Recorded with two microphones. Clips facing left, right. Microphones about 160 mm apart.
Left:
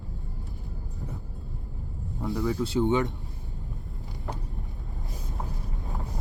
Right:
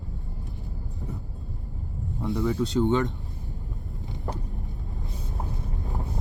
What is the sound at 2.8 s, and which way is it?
Speech, 20° left (ahead or behind).